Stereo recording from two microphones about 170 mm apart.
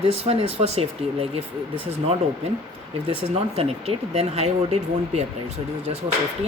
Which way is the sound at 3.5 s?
35° right (ahead or behind).